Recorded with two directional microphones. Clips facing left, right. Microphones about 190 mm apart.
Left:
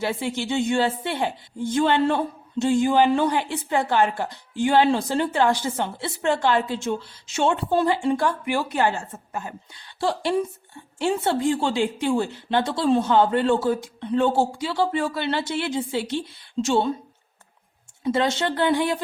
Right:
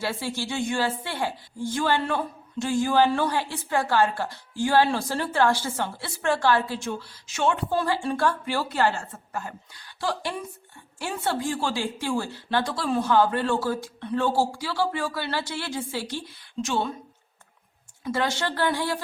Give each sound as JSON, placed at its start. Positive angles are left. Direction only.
{"t": 0.0, "sound": "a woman's voice", "side_deg": 20}
{"t": 18.0, "sound": "a woman's voice", "side_deg": 25}